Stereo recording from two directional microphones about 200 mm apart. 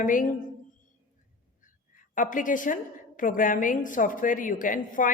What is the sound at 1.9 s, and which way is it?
A woman's voice, 40° left (ahead or behind).